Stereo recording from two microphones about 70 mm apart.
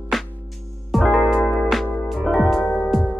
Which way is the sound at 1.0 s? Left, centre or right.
Left.